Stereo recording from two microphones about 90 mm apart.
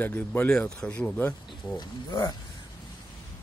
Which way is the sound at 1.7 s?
55° left (ahead or behind).